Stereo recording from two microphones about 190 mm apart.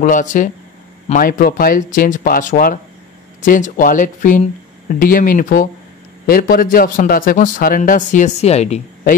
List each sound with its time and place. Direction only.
0.0 s a man's voice: 40° left (ahead or behind)